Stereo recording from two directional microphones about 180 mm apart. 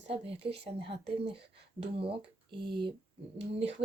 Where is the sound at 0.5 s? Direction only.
65° right (ahead or behind).